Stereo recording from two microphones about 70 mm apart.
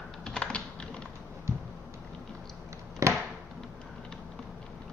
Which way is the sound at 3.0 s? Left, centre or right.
Right.